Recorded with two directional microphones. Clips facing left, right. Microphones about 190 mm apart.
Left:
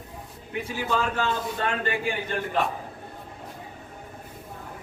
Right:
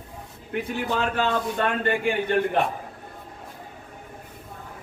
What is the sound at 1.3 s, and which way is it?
Speech, 60° right (ahead or behind).